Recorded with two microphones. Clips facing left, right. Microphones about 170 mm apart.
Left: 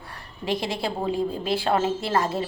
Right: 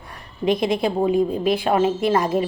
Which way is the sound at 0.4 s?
20° right (ahead or behind).